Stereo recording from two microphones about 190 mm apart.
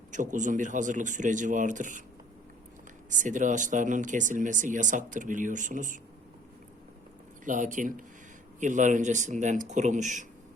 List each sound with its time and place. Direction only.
0.1 s speech: 40° right (ahead or behind)
3.1 s speech: 40° right (ahead or behind)
7.4 s speech: 45° right (ahead or behind)